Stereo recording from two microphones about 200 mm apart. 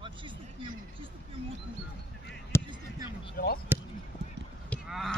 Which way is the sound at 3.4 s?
45° left (ahead or behind).